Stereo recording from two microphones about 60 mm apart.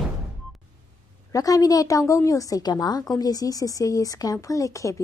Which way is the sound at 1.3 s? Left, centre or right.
Left.